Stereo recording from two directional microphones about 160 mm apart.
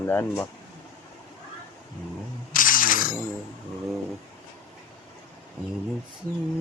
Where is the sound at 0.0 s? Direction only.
15° left (ahead or behind).